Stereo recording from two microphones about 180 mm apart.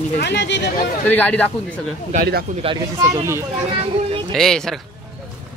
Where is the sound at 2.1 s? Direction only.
60° right (ahead or behind).